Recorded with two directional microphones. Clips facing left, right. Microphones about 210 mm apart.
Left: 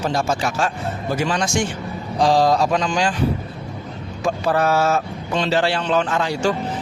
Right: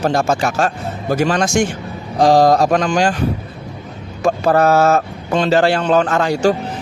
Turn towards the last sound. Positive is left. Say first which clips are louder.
# right 5 dB
turn(degrees=-45)  # may be behind; listen again after turning